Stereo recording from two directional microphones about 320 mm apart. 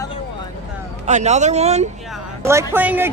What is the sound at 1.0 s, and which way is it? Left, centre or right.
Speech, right.